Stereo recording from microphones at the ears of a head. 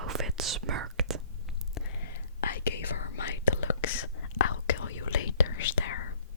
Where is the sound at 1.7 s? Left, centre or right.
Left.